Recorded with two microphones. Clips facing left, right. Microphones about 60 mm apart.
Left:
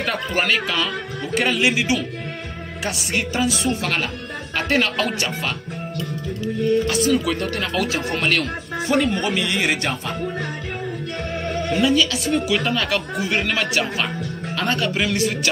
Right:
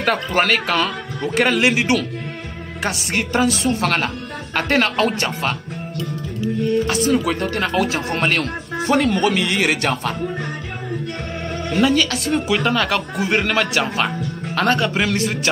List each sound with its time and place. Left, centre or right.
0.0 s a man's voice: right
6.9 s speech: right
8.8 s a man's voice: right
11.8 s speech: right
12.4 s speech: right